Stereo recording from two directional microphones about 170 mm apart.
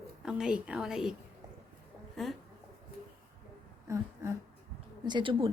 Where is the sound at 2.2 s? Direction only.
Centre (ahead or behind).